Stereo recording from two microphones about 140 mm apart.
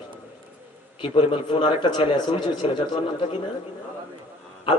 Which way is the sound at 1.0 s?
40° left (ahead or behind).